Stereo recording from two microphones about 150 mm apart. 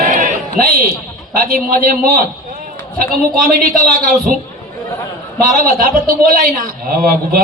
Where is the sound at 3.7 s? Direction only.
65° right (ahead or behind).